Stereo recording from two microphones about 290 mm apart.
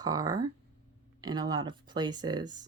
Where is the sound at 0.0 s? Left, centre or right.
Centre.